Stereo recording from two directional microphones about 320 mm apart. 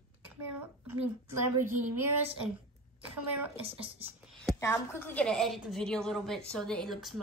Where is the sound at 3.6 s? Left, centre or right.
Centre.